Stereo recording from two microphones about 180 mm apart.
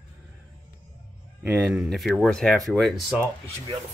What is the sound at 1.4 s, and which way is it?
Speech, 5° right (ahead or behind).